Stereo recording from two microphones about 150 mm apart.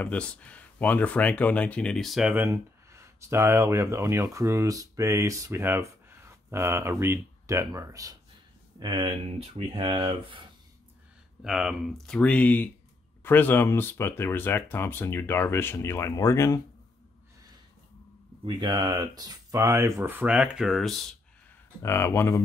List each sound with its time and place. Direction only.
0.0 s speech: 10° left (ahead or behind); by 10.4 s 35° right (ahead or behind)
11.4 s speech: 5° right (ahead or behind); by 16.6 s 20° left (ahead or behind)
18.4 s speech: 30° right (ahead or behind); by 21.1 s centre (ahead or behind)
21.8 s speech: 15° left (ahead or behind)